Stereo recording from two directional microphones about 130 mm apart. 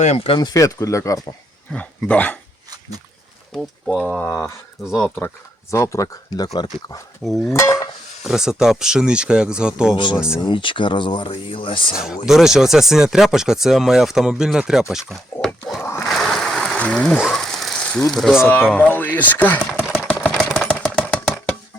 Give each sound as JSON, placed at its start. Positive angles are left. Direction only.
{"t": 0.3, "sound": "speech", "side_deg": 35}
{"t": 1.7, "sound": "speech", "side_deg": 10}
{"t": 3.5, "sound": "speech", "side_deg": 0}
{"t": 8.2, "sound": "speech", "side_deg": -5}
{"t": 9.9, "sound": "speech", "side_deg": 35}
{"t": 10.2, "sound": "speech", "side_deg": -5}
{"t": 10.4, "sound": "speech", "side_deg": 40}
{"t": 12.2, "sound": "speech", "side_deg": -5}
{"t": 15.8, "sound": "a sound", "side_deg": 20}
{"t": 16.0, "sound": "a sound", "side_deg": 0}
{"t": 18.4, "sound": "speech", "side_deg": 15}
{"t": 19.7, "sound": "chopping", "side_deg": -10}
{"t": 20.2, "sound": "engine", "side_deg": 5}
{"t": 20.7, "sound": "engine", "side_deg": 10}